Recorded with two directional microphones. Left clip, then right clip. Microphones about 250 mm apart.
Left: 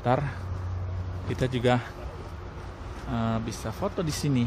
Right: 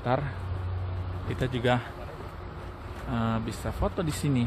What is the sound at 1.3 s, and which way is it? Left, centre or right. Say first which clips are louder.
Speech: left 2 dB; left.